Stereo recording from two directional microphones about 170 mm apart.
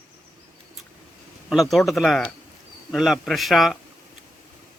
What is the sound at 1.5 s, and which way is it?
Speech, centre (ahead or behind).